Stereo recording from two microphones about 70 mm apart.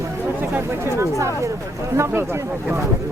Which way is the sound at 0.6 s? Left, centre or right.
Right.